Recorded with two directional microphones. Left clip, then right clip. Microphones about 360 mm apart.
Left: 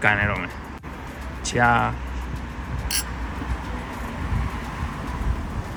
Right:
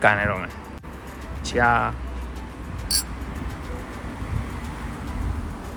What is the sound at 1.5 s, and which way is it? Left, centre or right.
Speech, centre.